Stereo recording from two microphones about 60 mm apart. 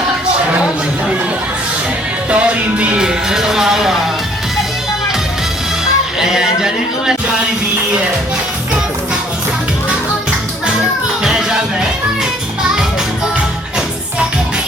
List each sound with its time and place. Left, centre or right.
2.3 s music: right
3.0 s music: centre
6.1 s a sound: centre
11.2 s music: centre